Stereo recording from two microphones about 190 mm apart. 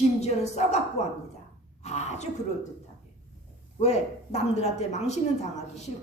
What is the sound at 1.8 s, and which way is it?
Speech, 35° left (ahead or behind).